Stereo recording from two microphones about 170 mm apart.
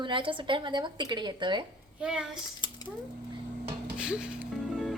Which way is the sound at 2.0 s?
5° right (ahead or behind).